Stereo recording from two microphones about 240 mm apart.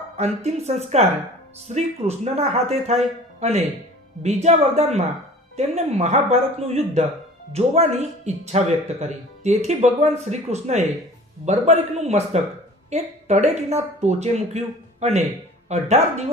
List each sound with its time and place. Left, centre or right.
0.4 s speech: right
4.2 s speech: right